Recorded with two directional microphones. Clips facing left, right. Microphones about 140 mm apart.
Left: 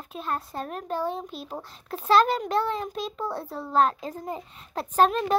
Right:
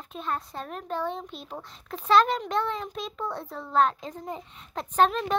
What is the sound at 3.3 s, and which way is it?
Speech, 30° left (ahead or behind).